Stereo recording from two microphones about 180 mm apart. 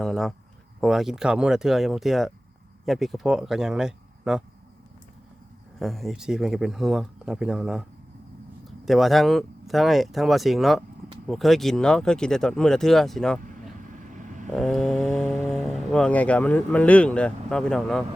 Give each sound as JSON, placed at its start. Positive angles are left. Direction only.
{"t": 0.0, "sound": "speech", "side_deg": 0}
{"t": 5.8, "sound": "speech", "side_deg": 0}
{"t": 13.8, "sound": "vehicle", "side_deg": -45}
{"t": 14.5, "sound": "speech", "side_deg": 0}